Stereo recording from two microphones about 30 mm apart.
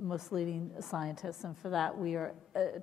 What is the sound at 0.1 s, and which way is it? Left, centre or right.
A woman's voice, centre.